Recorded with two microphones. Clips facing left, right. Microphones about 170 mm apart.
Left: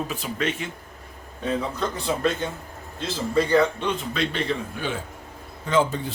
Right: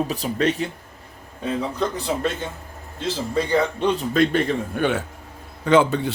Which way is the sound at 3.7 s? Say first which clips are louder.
Right 7 dB; 40° right (ahead or behind).